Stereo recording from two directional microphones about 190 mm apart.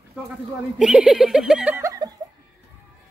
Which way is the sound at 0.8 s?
5° right (ahead or behind).